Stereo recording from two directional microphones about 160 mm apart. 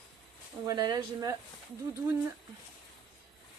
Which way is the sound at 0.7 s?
20° right (ahead or behind).